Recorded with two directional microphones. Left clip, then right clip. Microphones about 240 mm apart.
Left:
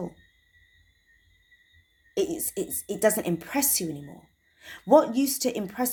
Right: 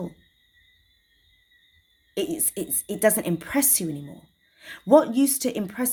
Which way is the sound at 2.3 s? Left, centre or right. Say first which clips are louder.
Right 1 dB; right.